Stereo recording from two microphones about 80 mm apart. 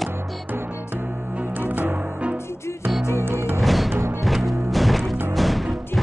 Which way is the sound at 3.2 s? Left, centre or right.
Right.